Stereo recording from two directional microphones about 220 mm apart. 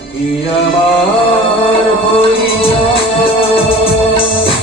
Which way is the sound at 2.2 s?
25° left (ahead or behind).